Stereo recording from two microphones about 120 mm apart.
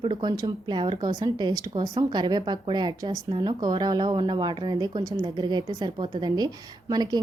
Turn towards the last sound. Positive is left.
turn(degrees=-35)  # may be behind; listen again after turning